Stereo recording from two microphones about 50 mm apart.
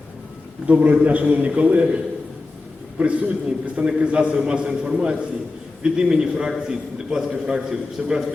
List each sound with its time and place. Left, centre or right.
0.7 s a man's voice: right
3.0 s a man's voice: right